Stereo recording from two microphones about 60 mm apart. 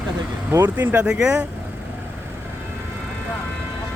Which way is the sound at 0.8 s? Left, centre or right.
Right.